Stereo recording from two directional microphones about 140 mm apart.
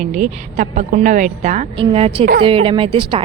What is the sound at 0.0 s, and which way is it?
A woman's voice, 60° right (ahead or behind).